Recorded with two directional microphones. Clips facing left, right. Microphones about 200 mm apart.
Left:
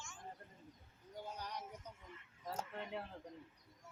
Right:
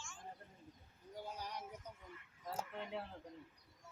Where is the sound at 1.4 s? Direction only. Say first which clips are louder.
Even; 10° right (ahead or behind).